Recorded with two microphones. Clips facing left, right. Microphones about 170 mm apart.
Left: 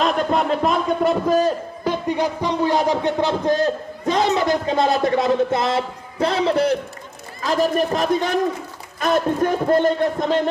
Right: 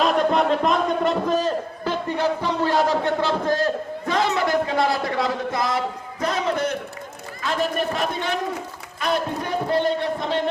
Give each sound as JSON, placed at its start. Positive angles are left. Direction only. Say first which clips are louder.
{"t": 0.0, "sound": "a man's voice", "louder": "even", "side_deg": 0}